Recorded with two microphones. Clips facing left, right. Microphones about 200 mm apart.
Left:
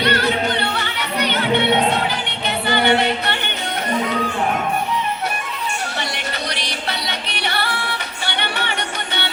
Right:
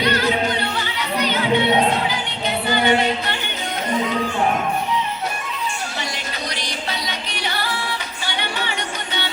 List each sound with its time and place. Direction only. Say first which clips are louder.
0.0 s music: even; 65° left (ahead or behind)
6.5 s music: left 1 dB; 65° left (ahead or behind)